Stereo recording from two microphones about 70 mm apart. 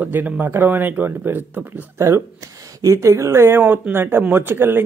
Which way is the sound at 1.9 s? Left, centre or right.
Right.